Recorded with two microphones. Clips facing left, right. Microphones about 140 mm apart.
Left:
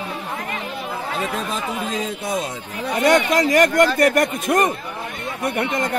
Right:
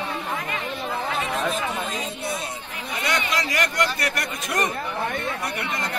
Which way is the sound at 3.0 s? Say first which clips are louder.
Left 10 dB; 50° left (ahead or behind).